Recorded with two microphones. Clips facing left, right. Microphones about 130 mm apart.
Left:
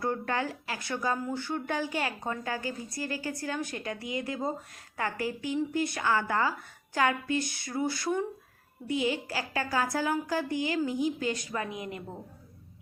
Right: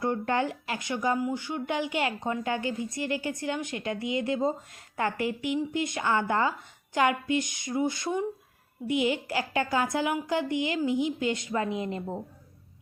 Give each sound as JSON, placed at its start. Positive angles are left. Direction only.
{"t": 0.0, "sound": "speech", "side_deg": -25}